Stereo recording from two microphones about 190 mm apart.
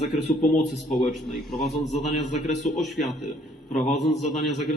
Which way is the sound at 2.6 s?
40° left (ahead or behind).